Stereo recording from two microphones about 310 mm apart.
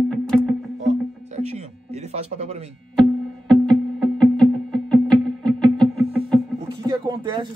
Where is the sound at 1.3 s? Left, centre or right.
Right.